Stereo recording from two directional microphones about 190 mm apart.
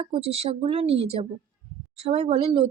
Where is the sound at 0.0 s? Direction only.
30° right (ahead or behind).